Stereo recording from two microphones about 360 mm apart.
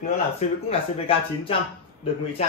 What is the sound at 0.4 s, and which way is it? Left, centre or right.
Speech, centre.